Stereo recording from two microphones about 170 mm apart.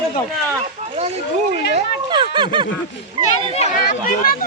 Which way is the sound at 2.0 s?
30° right (ahead or behind).